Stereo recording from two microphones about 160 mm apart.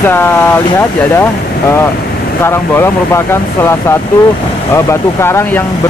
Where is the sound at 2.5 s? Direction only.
15° left (ahead or behind).